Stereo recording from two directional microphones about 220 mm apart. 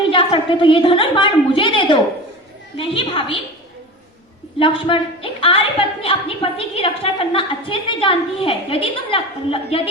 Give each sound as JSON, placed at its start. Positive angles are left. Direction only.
{"t": 0.1, "sound": "a woman's voice", "side_deg": 25}
{"t": 4.6, "sound": "a woman's voice", "side_deg": 25}